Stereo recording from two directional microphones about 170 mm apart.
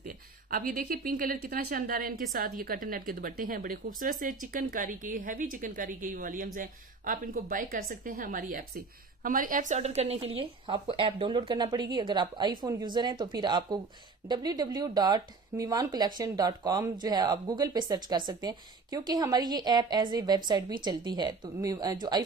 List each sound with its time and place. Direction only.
0.0 s a woman's voice: 55° right (ahead or behind); by 22.2 s 25° right (ahead or behind)